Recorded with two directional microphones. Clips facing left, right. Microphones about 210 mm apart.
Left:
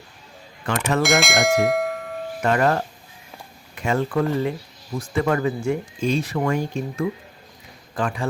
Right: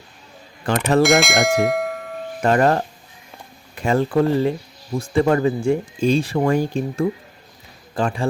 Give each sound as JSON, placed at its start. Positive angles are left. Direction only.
{"t": 0.6, "sound": "speech", "side_deg": -30}
{"t": 1.0, "sound": "bell", "side_deg": 0}
{"t": 2.4, "sound": "a man's voice", "side_deg": -35}